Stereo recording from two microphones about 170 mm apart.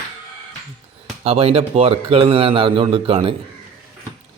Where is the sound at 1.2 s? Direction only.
35° right (ahead or behind).